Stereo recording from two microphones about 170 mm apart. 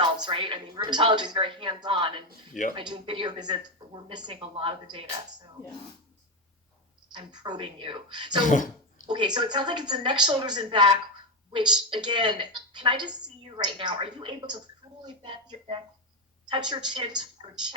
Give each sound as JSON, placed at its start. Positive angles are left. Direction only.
{"t": 0.0, "sound": "a woman's voice", "side_deg": -30}
{"t": 7.3, "sound": "a woman's voice", "side_deg": -25}
{"t": 8.4, "sound": "speech", "side_deg": 50}
{"t": 9.0, "sound": "a woman's voice", "side_deg": -25}